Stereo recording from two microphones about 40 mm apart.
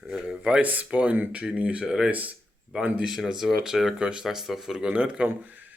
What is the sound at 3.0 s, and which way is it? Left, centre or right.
Speech, centre.